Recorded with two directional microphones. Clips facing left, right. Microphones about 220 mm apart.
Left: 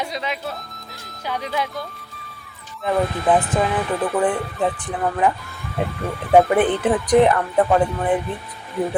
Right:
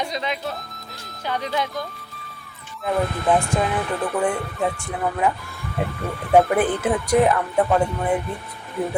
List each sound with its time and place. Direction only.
0.0 s speech: 5° left (ahead or behind)
2.8 s speech: centre (ahead or behind)